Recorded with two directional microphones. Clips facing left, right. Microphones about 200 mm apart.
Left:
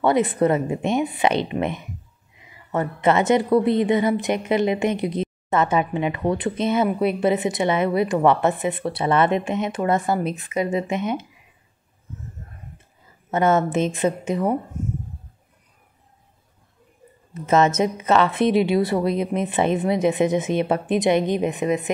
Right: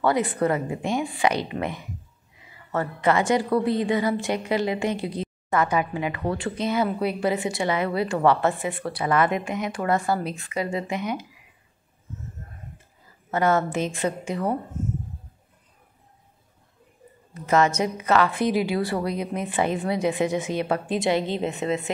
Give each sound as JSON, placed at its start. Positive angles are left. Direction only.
{"t": 0.0, "sound": "a woman's voice", "side_deg": 20}
{"t": 13.3, "sound": "a woman's voice", "side_deg": 20}
{"t": 17.3, "sound": "a woman's voice", "side_deg": 20}